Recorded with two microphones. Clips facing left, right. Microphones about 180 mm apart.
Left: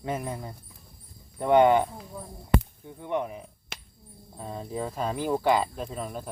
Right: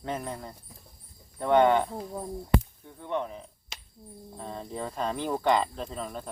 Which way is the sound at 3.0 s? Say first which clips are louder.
Left 2 dB; 15° left (ahead or behind).